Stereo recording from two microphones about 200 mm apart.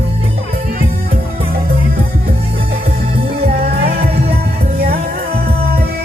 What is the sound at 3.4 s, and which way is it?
Music, 50° right (ahead or behind).